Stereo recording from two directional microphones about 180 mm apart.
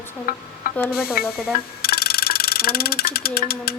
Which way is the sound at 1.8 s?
60° left (ahead or behind).